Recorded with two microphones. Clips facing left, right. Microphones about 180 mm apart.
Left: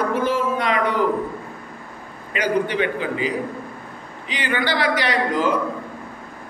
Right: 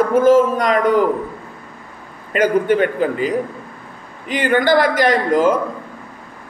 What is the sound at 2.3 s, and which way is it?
Speech, 50° right (ahead or behind).